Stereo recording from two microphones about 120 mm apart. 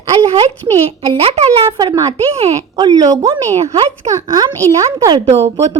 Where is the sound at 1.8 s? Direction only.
35° right (ahead or behind).